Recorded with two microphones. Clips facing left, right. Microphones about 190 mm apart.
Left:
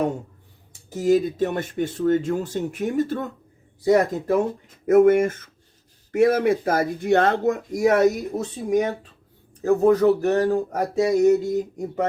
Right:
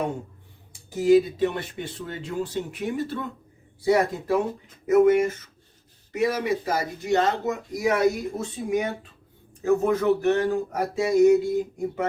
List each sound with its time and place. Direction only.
0.9 s speech: 45° left (ahead or behind)